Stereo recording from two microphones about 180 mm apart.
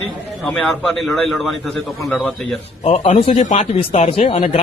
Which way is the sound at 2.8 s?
35° left (ahead or behind).